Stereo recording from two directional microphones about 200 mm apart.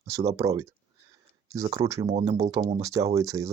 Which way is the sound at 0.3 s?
15° right (ahead or behind).